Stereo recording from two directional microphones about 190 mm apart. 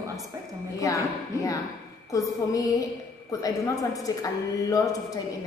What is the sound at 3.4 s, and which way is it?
A woman's voice, 20° left (ahead or behind).